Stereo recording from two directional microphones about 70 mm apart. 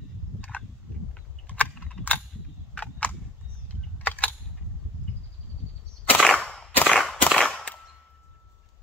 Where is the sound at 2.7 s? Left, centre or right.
Left.